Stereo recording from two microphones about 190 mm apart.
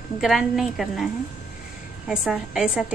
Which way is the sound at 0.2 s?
Centre (ahead or behind).